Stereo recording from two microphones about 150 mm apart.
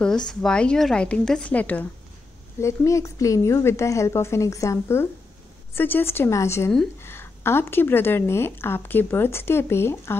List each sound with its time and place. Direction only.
0.3 s a woman's voice: 5° left (ahead or behind)